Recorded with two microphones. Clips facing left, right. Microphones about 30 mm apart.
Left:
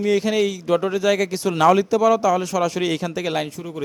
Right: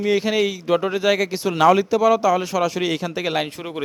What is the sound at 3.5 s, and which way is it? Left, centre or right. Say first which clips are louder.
Speech: right 1 dB; right.